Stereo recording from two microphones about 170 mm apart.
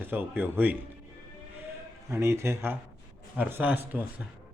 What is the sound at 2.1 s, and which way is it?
A man's voice, 15° right (ahead or behind).